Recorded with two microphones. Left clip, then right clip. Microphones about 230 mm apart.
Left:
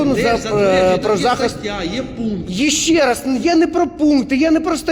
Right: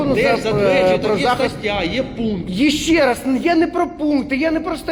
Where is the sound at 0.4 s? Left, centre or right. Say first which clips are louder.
Left 1 dB; left.